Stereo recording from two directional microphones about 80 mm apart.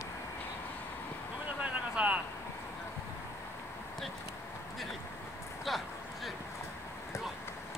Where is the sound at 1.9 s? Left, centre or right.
Centre.